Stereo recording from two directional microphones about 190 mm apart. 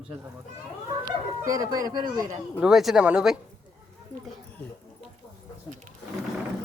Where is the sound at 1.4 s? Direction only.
20° right (ahead or behind).